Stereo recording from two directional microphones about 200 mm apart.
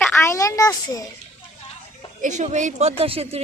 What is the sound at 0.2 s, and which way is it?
Speech, 15° left (ahead or behind).